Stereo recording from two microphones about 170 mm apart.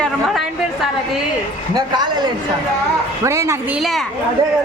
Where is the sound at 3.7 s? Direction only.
Centre (ahead or behind).